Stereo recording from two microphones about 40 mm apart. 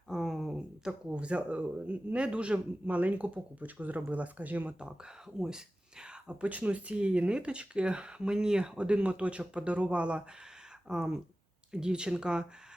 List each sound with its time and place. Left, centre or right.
0.1 s a sound: centre
0.9 s speech: right
5.4 s speech: centre
6.4 s speech: right
10.8 s speech: centre